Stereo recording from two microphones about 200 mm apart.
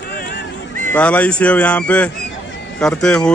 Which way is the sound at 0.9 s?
10° left (ahead or behind).